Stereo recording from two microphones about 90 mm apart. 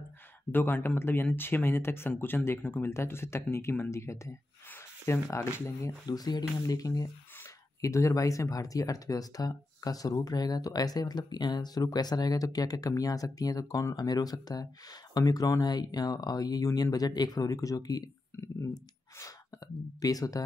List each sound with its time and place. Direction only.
0.5 s speech: 20° left (ahead or behind)
6.0 s speech: 50° left (ahead or behind)